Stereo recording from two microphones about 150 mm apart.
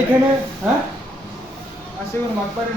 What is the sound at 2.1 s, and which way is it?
Speech, 15° left (ahead or behind).